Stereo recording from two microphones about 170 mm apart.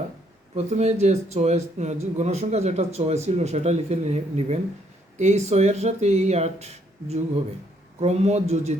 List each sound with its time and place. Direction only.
0.5 s speech: 40° right (ahead or behind)